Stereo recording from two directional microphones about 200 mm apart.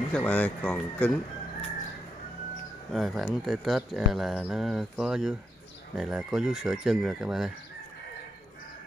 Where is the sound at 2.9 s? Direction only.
Centre (ahead or behind).